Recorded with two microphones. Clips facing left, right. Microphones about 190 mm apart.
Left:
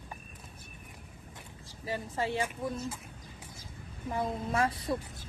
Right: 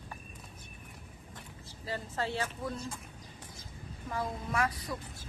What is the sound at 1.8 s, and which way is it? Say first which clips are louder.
Speech: left 2 dB; 15° left (ahead or behind).